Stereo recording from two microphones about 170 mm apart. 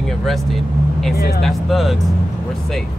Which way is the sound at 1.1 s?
65° left (ahead or behind).